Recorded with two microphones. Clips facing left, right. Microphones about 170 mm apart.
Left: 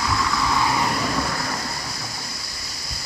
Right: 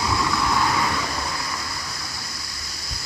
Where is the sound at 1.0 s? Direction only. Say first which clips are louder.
Left 4 dB; 55° left (ahead or behind).